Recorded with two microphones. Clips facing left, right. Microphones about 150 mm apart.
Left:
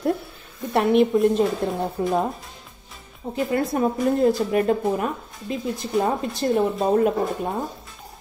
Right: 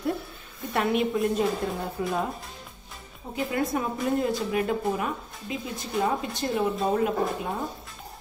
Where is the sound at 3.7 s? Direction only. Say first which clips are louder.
Left 8 dB; 40° left (ahead or behind).